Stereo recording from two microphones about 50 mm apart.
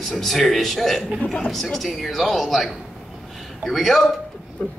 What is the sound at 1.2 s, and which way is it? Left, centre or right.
Speech, left.